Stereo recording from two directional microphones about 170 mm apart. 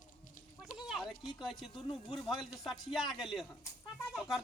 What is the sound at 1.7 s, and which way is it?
Speech, 30° left (ahead or behind).